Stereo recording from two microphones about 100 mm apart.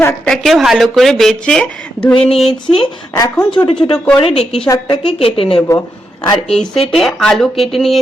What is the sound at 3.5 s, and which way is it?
Speech, 55° left (ahead or behind).